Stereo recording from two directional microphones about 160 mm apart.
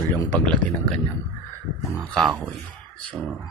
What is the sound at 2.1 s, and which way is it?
Speech, centre (ahead or behind).